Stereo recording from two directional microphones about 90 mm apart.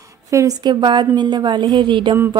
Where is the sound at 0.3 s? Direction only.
40° right (ahead or behind).